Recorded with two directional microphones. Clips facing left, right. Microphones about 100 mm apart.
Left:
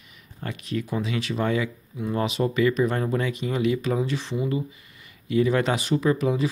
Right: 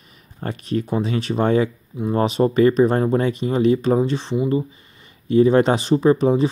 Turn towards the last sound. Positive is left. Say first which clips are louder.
# right 7 dB
turn(degrees=-30)  # may be behind; listen again after turning